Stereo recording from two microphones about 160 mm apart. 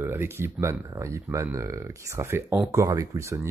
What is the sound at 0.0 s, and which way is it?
Speech, 15° right (ahead or behind).